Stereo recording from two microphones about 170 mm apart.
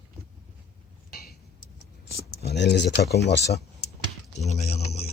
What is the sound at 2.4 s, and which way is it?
Speech, 75° left (ahead or behind).